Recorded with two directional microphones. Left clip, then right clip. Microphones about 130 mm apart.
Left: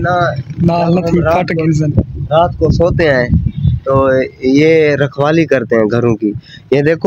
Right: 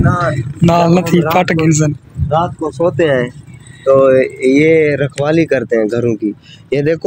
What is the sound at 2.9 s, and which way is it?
Speech, 45° left (ahead or behind).